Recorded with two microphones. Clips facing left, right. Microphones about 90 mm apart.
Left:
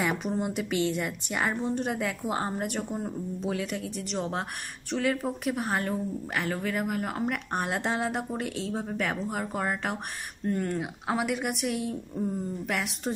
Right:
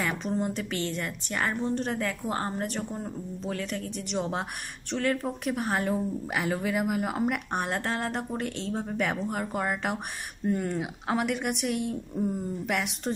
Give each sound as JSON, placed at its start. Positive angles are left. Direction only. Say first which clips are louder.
{"t": 0.0, "sound": "a woman's voice", "louder": "left 1 dB", "side_deg": 10}
{"t": 7.8, "sound": "speech", "louder": "left 1 dB", "side_deg": 10}